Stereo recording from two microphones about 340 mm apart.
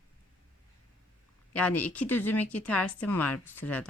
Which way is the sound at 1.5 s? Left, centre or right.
Centre.